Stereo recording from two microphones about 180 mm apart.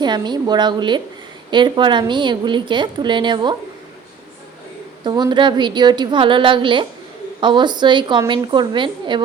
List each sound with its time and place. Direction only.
0.0 s a woman's voice: 25° right (ahead or behind)
5.0 s a woman's voice: 25° right (ahead or behind)